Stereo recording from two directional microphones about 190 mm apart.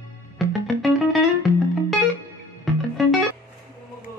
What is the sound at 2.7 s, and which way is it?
Music, centre (ahead or behind).